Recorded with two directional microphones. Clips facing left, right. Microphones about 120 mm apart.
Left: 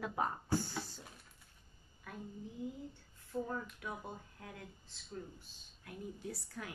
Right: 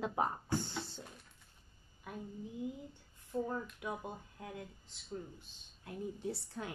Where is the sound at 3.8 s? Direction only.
20° right (ahead or behind).